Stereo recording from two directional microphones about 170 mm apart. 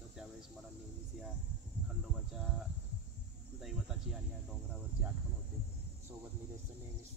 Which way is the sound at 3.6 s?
Centre (ahead or behind).